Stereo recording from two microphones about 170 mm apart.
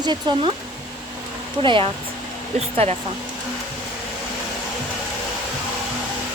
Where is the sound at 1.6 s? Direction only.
30° right (ahead or behind).